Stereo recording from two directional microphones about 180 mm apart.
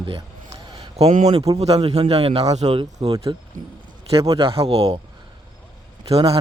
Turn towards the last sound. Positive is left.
turn(degrees=-30)  # may be behind; listen again after turning